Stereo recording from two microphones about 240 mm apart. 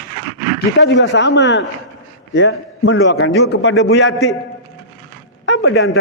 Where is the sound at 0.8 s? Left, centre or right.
Left.